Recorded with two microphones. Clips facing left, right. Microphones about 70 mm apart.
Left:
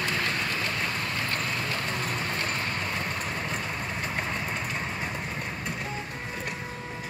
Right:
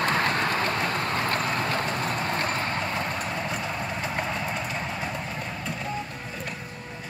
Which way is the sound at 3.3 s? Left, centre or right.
Centre.